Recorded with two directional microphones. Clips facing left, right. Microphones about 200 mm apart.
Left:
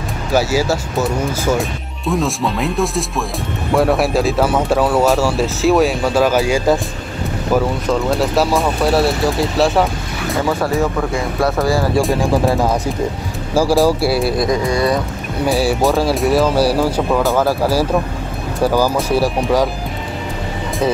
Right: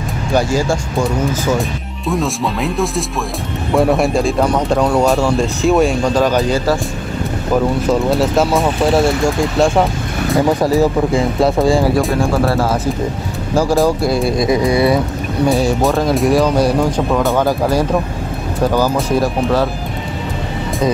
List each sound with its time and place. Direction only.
0.3 s speech: 5° left (ahead or behind)
7.9 s speech: centre (ahead or behind)
10.3 s speech: 15° right (ahead or behind)
12.1 s speech: 15° left (ahead or behind); by 15.0 s 10° right (ahead or behind)
15.4 s speech: 5° left (ahead or behind)